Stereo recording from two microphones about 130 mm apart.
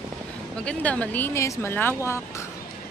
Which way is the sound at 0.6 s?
10° left (ahead or behind).